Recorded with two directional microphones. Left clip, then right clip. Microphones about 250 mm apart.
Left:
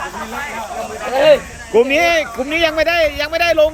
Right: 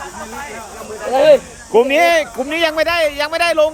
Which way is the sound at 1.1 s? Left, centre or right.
Right.